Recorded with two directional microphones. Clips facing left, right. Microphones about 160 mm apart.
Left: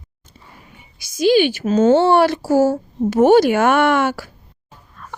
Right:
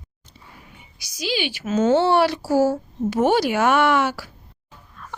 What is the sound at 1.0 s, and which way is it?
Speech, 50° left (ahead or behind).